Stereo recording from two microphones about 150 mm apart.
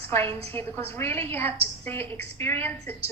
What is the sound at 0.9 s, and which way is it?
A woman's voice, 15° left (ahead or behind).